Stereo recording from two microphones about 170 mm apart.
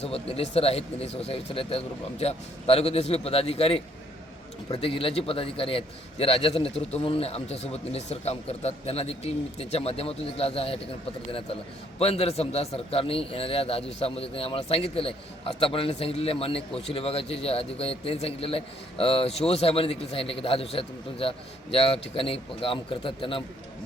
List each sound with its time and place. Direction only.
0.0 s a man's voice: 35° left (ahead or behind)
11.9 s a man's voice: 35° left (ahead or behind)